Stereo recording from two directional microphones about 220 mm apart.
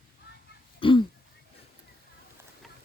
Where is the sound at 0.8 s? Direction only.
25° left (ahead or behind).